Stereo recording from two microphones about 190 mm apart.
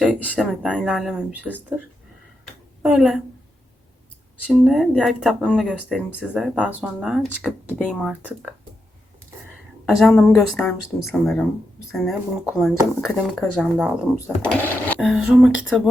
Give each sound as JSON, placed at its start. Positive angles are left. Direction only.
{"t": 0.0, "sound": "speech", "side_deg": -5}
{"t": 2.4, "sound": "a sound", "side_deg": -5}
{"t": 4.4, "sound": "speech", "side_deg": 0}
{"t": 9.8, "sound": "speech", "side_deg": 0}
{"t": 14.4, "sound": "speech", "side_deg": 10}
{"t": 14.9, "sound": "speech", "side_deg": -5}